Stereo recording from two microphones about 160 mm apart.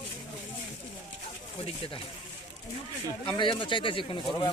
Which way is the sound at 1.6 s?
35° left (ahead or behind).